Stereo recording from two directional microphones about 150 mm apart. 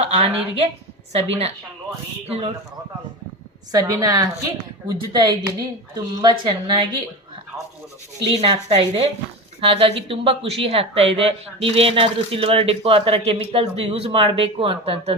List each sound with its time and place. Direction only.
0.0 s a woman's voice: 40° right (ahead or behind)
3.7 s speech: 25° right (ahead or behind)
8.2 s speech: 40° right (ahead or behind)